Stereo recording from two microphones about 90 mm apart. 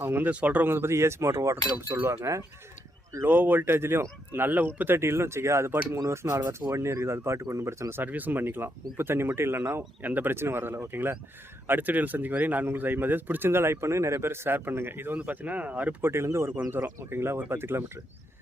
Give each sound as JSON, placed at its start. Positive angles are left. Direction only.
{"t": 0.0, "sound": "speech", "side_deg": -25}
{"t": 0.3, "sound": "speech", "side_deg": -15}
{"t": 4.9, "sound": "speech", "side_deg": -30}